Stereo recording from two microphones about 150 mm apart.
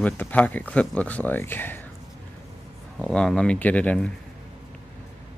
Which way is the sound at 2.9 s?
5° left (ahead or behind).